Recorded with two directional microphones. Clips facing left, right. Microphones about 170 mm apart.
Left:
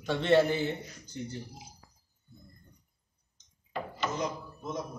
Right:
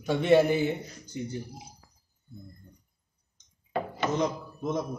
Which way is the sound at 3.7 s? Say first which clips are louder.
Right 5 dB; 65° right (ahead or behind).